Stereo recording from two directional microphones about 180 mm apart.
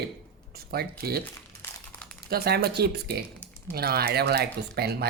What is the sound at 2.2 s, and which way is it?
Speech, 60° right (ahead or behind).